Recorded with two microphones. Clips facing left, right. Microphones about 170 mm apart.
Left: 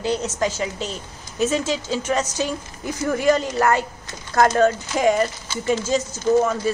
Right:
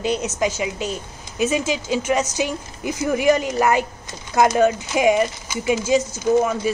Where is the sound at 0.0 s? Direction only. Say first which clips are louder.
Right 1 dB; 15° right (ahead or behind).